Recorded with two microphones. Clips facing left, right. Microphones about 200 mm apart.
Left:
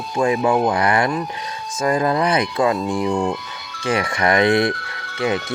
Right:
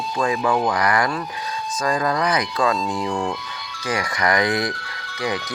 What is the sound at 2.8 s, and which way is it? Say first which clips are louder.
Speech: left 4 dB; 60° left (ahead or behind).